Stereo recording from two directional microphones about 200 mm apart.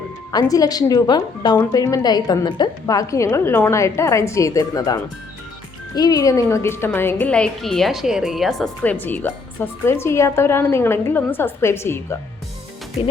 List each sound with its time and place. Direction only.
0.3 s speech: 20° left (ahead or behind)